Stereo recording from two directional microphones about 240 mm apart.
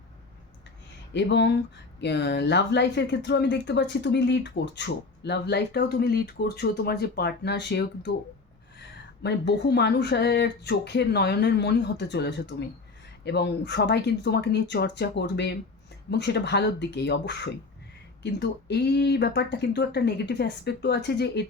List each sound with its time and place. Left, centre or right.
1.1 s speech: left
9.2 s speech: left